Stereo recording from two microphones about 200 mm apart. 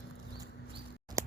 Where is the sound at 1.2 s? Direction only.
15° right (ahead or behind).